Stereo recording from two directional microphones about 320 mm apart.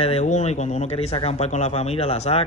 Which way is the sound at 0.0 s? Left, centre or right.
Left.